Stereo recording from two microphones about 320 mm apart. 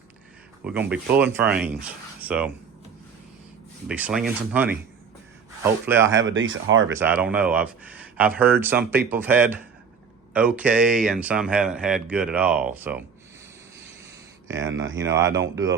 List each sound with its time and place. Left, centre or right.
0.6 s speech: centre
3.8 s speech: centre
6.1 s speech: right
6.9 s speech: centre
14.4 s speech: centre
14.7 s speech: right
14.9 s speech: centre